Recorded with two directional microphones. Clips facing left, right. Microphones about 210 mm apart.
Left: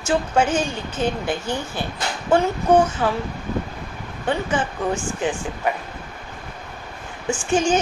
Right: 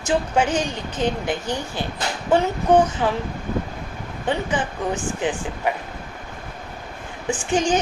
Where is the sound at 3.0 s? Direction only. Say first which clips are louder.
Even; 15° right (ahead or behind).